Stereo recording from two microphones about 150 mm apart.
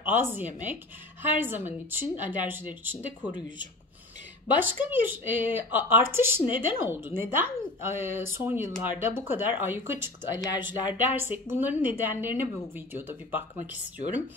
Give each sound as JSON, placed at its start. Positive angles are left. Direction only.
{"t": 0.0, "sound": "speech", "side_deg": -10}
{"t": 3.2, "sound": "speech", "side_deg": 30}
{"t": 4.6, "sound": "speech", "side_deg": -15}
{"t": 10.4, "sound": "speech", "side_deg": 25}
{"t": 10.9, "sound": "speech", "side_deg": -15}